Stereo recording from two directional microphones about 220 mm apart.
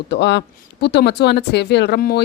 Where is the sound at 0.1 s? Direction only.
50° left (ahead or behind).